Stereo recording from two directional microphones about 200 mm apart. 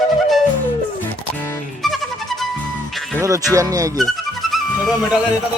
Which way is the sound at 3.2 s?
15° right (ahead or behind).